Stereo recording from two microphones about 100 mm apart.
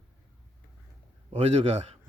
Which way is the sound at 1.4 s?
90° right.